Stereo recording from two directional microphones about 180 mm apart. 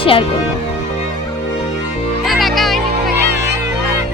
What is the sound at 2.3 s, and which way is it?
Music, centre (ahead or behind).